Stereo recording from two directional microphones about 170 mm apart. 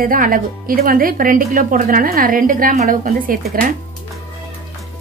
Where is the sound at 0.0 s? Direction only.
55° right (ahead or behind).